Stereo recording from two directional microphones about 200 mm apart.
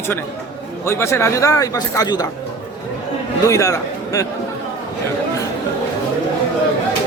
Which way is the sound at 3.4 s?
15° left (ahead or behind).